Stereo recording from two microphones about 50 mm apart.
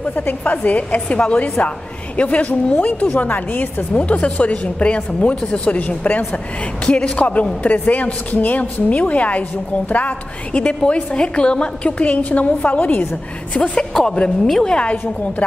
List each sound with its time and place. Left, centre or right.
0.1 s a woman's voice: left
13.5 s a woman's voice: centre